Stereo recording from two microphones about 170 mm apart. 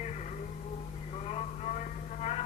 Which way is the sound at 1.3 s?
40° left (ahead or behind).